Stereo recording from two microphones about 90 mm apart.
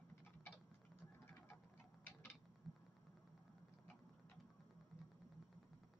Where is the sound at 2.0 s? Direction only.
25° left (ahead or behind).